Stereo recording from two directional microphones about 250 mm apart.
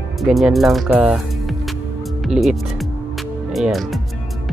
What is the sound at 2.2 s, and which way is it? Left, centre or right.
Music, centre.